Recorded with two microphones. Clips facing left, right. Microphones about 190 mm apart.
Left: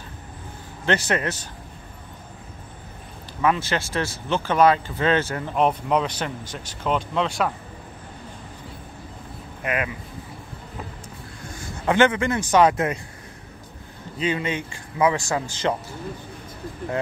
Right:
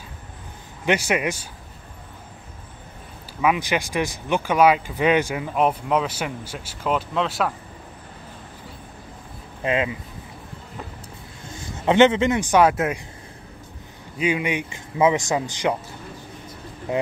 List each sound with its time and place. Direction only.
0.8 s speech: 10° right (ahead or behind)
3.3 s speech: 10° right (ahead or behind)
9.6 s speech: 25° right (ahead or behind)
11.7 s speech: 20° right (ahead or behind)
14.1 s speech: 10° right (ahead or behind)